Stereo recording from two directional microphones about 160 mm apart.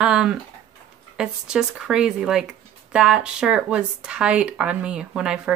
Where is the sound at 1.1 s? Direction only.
5° right (ahead or behind).